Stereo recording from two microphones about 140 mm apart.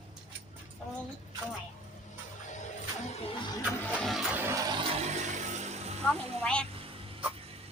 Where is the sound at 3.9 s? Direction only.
Centre (ahead or behind).